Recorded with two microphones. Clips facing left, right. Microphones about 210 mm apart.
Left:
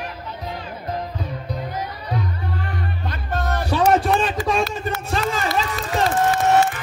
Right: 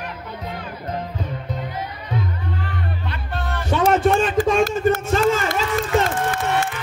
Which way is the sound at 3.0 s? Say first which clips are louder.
Left 3 dB; 40° left (ahead or behind).